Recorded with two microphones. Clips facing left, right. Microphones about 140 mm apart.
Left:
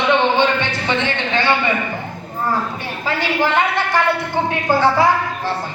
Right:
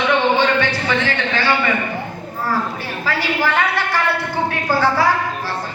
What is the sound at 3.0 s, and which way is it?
A woman's voice, 20° left (ahead or behind).